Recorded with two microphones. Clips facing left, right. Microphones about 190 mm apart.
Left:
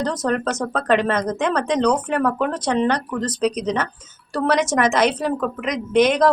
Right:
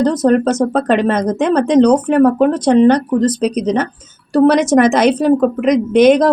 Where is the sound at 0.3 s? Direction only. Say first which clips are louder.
Right 10 dB; 30° right (ahead or behind).